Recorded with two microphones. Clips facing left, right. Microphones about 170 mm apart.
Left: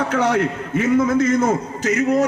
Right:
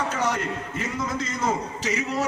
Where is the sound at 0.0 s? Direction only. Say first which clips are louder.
Left 8 dB; 60° left (ahead or behind).